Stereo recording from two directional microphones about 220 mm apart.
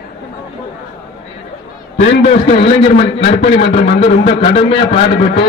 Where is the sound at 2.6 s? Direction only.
25° left (ahead or behind).